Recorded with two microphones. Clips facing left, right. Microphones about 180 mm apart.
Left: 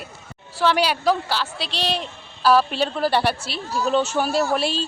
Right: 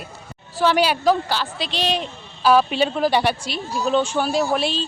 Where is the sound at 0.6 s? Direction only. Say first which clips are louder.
Right 2 dB; centre (ahead or behind).